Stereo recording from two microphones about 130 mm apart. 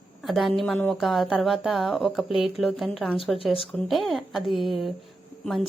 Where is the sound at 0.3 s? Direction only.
Centre (ahead or behind).